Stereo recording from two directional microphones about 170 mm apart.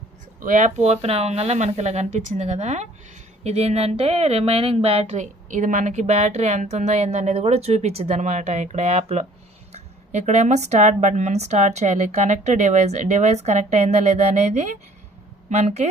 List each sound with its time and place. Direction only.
0.4 s speech: 45° right (ahead or behind)